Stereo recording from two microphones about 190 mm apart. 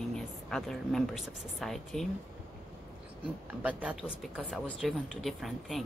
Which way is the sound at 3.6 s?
5° right (ahead or behind).